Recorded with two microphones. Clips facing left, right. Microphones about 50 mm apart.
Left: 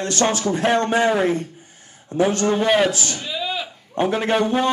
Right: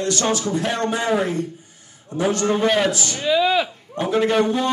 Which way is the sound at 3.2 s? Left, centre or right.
Right.